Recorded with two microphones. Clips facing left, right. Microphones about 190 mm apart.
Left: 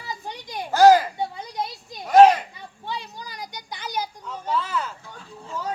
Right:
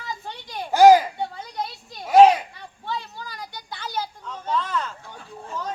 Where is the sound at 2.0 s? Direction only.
Centre (ahead or behind).